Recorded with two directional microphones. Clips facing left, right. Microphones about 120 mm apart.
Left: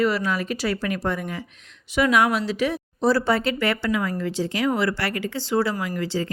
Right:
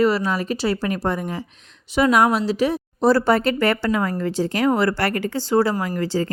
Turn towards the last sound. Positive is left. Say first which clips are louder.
# right 4 dB
turn(degrees=-40)  # may be behind; listen again after turning